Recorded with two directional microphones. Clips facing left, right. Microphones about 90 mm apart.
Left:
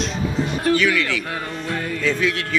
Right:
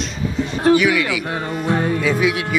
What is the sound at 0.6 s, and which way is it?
Speech, 15° right (ahead or behind).